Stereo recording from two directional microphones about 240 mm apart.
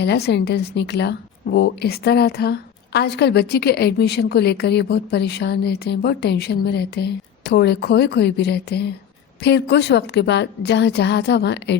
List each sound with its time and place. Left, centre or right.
0.0 s a woman's voice: left